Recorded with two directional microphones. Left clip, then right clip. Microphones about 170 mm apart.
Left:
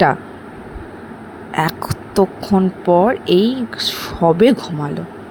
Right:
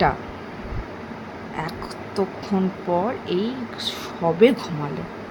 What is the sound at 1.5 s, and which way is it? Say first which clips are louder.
Speech: left 12 dB; 55° left (ahead or behind).